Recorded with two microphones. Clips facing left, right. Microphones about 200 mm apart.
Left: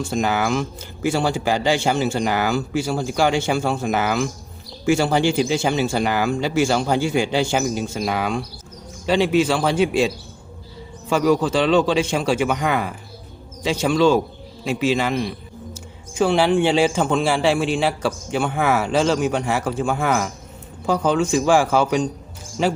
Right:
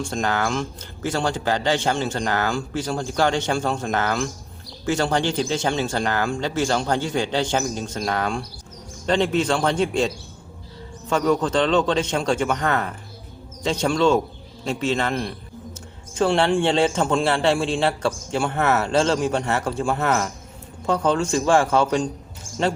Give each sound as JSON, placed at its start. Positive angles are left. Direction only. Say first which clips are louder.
{"t": 0.0, "sound": "speech", "louder": "left 3 dB", "side_deg": 5}
{"t": 11.1, "sound": "a man's voice", "louder": "left 2 dB", "side_deg": 10}